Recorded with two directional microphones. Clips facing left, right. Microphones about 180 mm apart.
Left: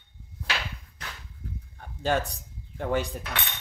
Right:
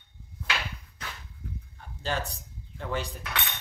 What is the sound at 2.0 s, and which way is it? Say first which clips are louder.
Speech: left 6 dB; 55° left (ahead or behind).